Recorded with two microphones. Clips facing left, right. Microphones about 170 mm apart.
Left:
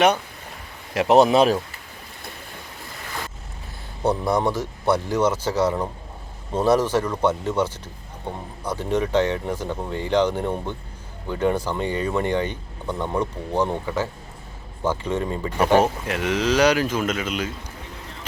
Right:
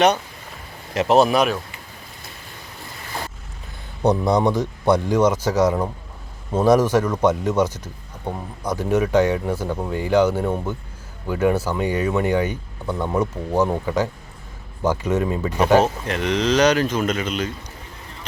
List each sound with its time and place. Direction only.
0.9 s speech: 15° left (ahead or behind)
4.0 s speech: 15° right (ahead or behind)
8.8 s speech: 10° right (ahead or behind)
15.8 s speech: 5° left (ahead or behind)